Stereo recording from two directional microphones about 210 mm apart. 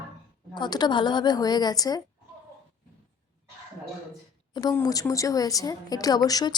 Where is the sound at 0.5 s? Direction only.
20° left (ahead or behind).